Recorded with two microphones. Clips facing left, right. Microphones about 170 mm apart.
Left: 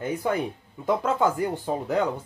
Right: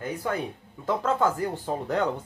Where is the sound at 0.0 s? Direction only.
20° left (ahead or behind).